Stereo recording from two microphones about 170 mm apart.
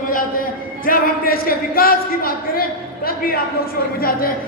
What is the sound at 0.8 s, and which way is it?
A man's voice, 60° left (ahead or behind).